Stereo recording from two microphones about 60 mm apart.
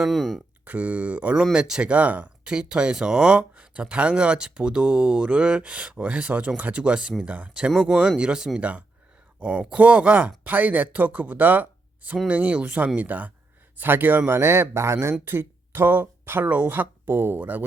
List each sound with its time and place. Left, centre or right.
0.0 s speech: centre
0.6 s speech: right
1.5 s speech: centre; by 17.4 s right
17.4 s speech: right